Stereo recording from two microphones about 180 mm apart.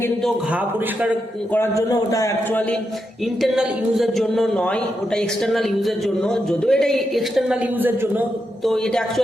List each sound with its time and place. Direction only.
1.5 s a man's voice: 15° left (ahead or behind)
3.4 s speech: centre (ahead or behind)
8.6 s speech: 5° left (ahead or behind)